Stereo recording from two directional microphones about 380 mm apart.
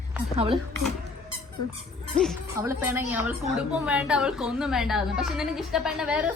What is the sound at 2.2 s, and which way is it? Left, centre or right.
A woman's voice, centre.